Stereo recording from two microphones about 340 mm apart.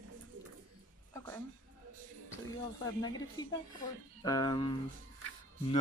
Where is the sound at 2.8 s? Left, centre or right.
Centre.